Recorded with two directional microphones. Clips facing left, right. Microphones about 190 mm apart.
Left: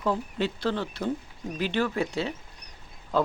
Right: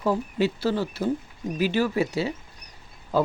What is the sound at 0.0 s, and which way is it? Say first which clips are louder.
Speech: right 4 dB; 5° right (ahead or behind).